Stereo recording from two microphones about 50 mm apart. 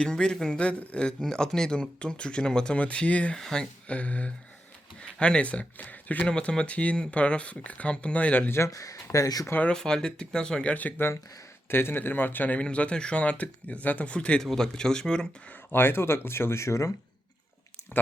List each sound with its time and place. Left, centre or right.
0.0 s speech: centre
3.3 s speech: centre
3.9 s speech: left
6.2 s speech: left
8.4 s speech: left
9.6 s speech: centre
10.7 s speech: left
11.7 s a man's voice: left
12.5 s speech: left
14.4 s speech: centre
15.7 s speech: left